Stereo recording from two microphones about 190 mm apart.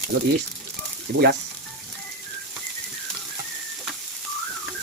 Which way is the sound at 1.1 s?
55° right (ahead or behind).